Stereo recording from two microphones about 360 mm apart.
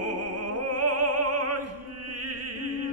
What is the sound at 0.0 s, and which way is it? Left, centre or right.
Opera, right.